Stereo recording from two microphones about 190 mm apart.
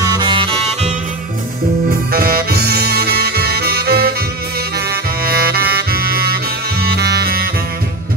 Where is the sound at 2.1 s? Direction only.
50° right (ahead or behind).